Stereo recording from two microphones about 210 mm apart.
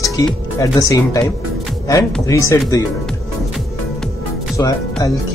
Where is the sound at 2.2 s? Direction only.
15° left (ahead or behind).